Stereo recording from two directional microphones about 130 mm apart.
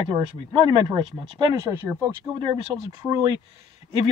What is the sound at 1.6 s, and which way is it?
Speech, 20° right (ahead or behind).